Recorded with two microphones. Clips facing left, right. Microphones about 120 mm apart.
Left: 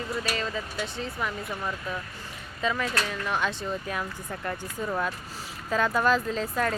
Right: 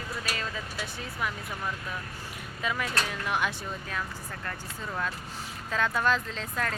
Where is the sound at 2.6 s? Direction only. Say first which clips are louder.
Left 3 dB; 10° right (ahead or behind).